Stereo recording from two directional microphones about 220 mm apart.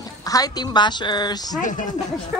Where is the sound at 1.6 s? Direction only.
35° left (ahead or behind).